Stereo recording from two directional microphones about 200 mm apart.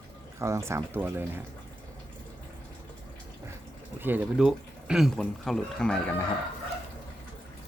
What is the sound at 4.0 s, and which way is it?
Speech, 10° right (ahead or behind).